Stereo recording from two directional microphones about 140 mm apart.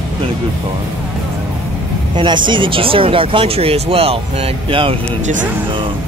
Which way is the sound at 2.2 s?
35° right (ahead or behind).